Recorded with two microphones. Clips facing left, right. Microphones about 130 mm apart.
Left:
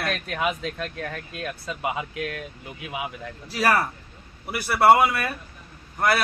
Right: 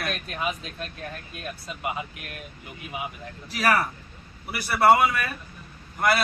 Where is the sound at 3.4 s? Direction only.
30° left (ahead or behind).